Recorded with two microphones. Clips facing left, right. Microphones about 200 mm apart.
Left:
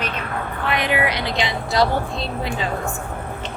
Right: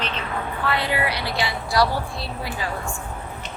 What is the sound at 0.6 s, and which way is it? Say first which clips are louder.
A woman's voice: left 3 dB; 20° left (ahead or behind).